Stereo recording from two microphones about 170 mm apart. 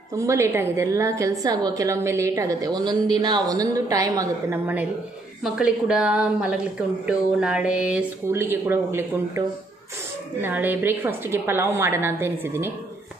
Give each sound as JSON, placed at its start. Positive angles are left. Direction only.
{"t": 0.1, "sound": "a woman's voice", "side_deg": -20}
{"t": 10.4, "sound": "speech", "side_deg": -10}